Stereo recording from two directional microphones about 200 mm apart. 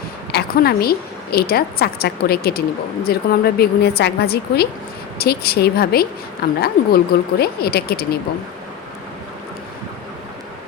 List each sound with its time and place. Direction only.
0.3 s a woman's voice: 55° left (ahead or behind)